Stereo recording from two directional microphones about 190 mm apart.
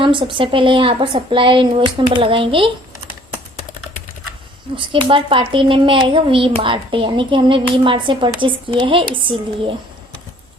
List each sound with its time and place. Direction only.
0.0 s speech: 25° right (ahead or behind)
4.8 s speech: 25° right (ahead or behind)